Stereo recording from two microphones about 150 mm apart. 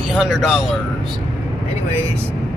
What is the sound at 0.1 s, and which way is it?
Speech, 5° right (ahead or behind).